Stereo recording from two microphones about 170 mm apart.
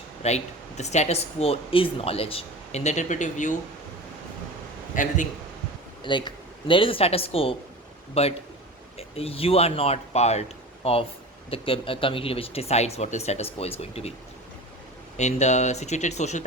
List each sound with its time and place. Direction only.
0.2 s speech: 40° left (ahead or behind)
4.9 s speech: 50° left (ahead or behind)
6.0 s speech: 30° left (ahead or behind)
15.2 s speech: 45° left (ahead or behind)